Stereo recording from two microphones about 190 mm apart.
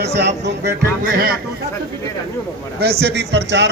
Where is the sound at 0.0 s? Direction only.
65° right (ahead or behind).